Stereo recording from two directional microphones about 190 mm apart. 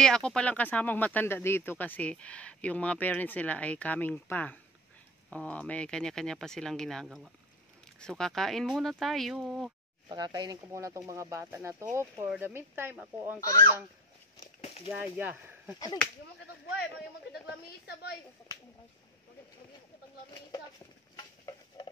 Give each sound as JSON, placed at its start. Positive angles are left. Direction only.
{"t": 0.0, "sound": "speech", "side_deg": 5}
{"t": 10.0, "sound": "speech", "side_deg": -20}
{"t": 14.4, "sound": "a sound", "side_deg": 35}
{"t": 14.9, "sound": "speech", "side_deg": -10}
{"t": 16.8, "sound": "speech", "side_deg": 60}
{"t": 21.2, "sound": "stir", "side_deg": 25}